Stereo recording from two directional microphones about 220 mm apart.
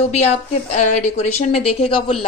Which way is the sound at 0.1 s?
30° left (ahead or behind).